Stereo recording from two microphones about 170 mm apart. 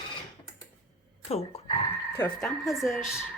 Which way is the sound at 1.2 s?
35° left (ahead or behind).